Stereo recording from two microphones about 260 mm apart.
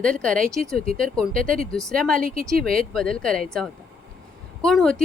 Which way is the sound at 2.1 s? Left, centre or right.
Right.